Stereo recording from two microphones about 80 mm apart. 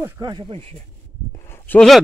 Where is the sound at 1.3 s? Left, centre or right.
Left.